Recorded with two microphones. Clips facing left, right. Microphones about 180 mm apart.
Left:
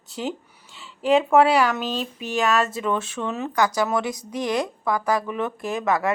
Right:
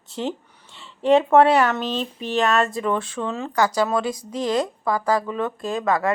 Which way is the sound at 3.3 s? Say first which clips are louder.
Even; 20° left (ahead or behind).